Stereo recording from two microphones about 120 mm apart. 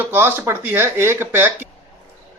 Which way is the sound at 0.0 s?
15° right (ahead or behind).